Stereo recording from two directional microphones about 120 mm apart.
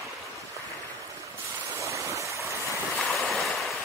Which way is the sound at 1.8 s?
25° right (ahead or behind).